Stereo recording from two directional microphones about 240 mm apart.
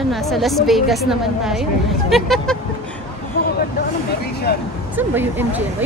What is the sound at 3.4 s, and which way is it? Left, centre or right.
Vehicle, left.